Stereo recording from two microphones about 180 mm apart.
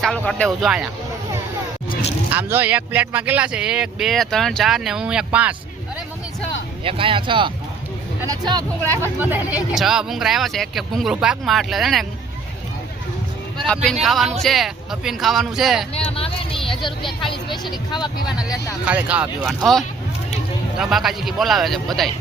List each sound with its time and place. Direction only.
0.0 s speech: 5° left (ahead or behind)
2.3 s speech: 10° right (ahead or behind)
6.8 s speech: 30° right (ahead or behind); by 12.0 s centre (ahead or behind)
14.0 s speech: centre (ahead or behind)
16.0 s speech: 30° left (ahead or behind)
17.7 s speech: 25° left (ahead or behind)
18.9 s speech: 5° right (ahead or behind)
20.7 s speech: centre (ahead or behind)